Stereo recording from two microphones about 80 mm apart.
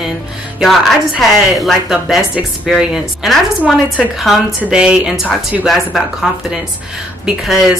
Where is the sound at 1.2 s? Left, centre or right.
Centre.